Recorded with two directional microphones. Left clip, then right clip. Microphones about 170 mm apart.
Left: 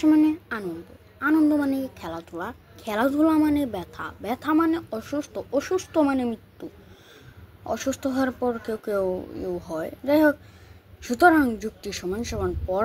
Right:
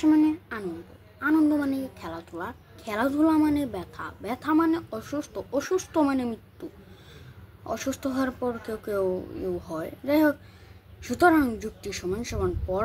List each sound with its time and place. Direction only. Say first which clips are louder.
0.0 s a woman's voice: left 2 dB; 15° left (ahead or behind)